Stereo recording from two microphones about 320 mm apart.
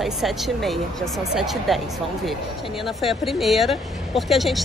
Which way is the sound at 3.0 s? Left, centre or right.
Centre.